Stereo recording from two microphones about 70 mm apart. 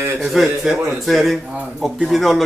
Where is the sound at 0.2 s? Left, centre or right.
Centre.